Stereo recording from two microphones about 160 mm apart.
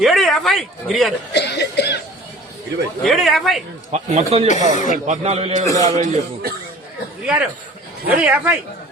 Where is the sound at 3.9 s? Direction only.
45° right (ahead or behind).